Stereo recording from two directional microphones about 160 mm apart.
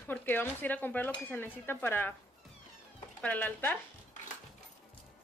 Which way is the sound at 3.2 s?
10° left (ahead or behind).